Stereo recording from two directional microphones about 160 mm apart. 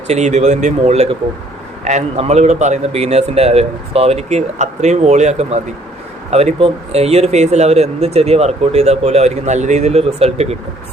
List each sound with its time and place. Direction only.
0.1 s a man's voice: 45° right (ahead or behind)